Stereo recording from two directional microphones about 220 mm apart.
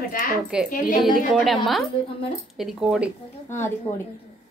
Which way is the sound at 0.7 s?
35° left (ahead or behind).